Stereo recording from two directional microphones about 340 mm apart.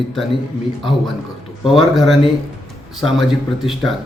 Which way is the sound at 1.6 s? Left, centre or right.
Centre.